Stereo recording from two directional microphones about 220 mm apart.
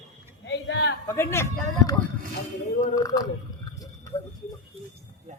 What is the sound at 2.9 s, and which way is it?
Speech, 15° left (ahead or behind).